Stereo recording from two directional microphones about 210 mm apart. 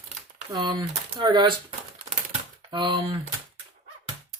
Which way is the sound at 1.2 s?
20° right (ahead or behind).